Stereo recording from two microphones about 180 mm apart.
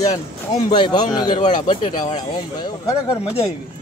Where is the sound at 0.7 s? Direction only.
25° left (ahead or behind).